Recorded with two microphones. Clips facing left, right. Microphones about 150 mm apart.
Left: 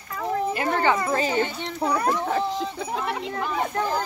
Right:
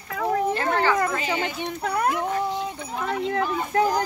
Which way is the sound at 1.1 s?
35° left (ahead or behind).